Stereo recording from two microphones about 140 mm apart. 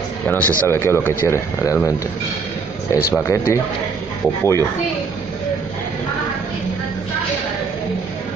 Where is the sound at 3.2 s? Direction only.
20° left (ahead or behind).